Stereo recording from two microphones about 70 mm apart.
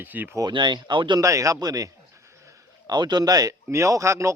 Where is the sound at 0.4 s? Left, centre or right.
Right.